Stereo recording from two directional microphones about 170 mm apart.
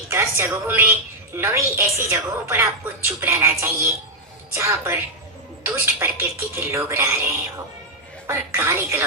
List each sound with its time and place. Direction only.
0.1 s a woman's voice: 15° right (ahead or behind)
8.3 s a woman's voice: 15° right (ahead or behind)